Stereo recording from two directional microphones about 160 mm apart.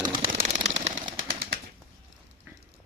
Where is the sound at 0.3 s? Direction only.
55° right (ahead or behind).